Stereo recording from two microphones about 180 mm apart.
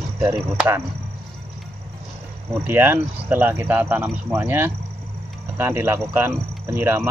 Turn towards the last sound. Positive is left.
turn(degrees=-15)  # may be behind; listen again after turning